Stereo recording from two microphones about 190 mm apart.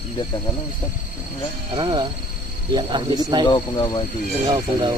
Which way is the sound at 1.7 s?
25° right (ahead or behind).